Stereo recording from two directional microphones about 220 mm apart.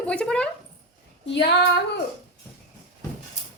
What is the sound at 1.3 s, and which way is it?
Female singing, 50° left (ahead or behind).